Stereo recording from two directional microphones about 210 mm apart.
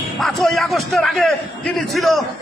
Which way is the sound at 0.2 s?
Centre (ahead or behind).